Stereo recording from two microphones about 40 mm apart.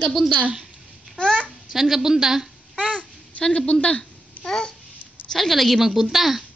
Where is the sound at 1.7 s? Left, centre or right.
Centre.